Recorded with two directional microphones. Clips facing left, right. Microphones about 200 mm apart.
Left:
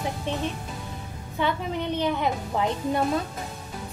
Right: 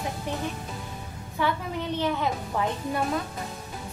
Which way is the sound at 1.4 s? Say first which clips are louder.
Left 1 dB; 20° left (ahead or behind).